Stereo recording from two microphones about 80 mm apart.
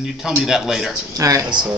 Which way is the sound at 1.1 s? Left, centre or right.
Right.